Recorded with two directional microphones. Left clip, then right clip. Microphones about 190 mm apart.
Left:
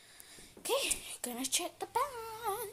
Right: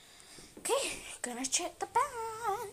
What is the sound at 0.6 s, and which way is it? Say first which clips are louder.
A woman's voice: right 1 dB; 10° left (ahead or behind).